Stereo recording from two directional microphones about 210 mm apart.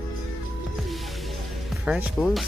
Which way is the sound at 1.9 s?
5° right (ahead or behind).